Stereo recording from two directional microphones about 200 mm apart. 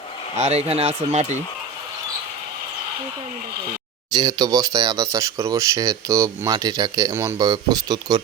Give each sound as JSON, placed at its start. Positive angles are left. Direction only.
{"t": 0.3, "sound": "speech", "side_deg": -30}
{"t": 4.1, "sound": "speech", "side_deg": -20}